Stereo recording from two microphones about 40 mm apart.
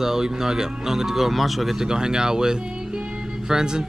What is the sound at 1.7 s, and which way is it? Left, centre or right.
Speech, centre.